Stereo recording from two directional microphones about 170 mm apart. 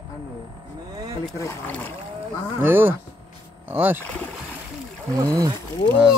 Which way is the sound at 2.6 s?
10° right (ahead or behind).